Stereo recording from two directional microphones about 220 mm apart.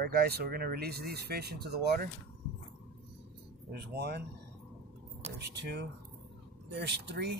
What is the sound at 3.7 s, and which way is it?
Speech, 50° right (ahead or behind).